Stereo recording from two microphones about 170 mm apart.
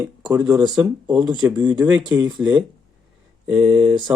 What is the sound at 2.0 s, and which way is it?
Speech, 25° right (ahead or behind).